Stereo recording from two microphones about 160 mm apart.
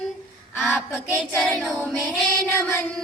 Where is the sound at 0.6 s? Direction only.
5° left (ahead or behind).